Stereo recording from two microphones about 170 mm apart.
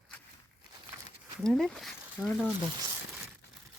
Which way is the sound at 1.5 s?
Centre (ahead or behind).